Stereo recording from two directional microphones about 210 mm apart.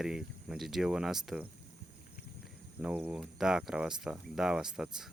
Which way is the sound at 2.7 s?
10° right (ahead or behind).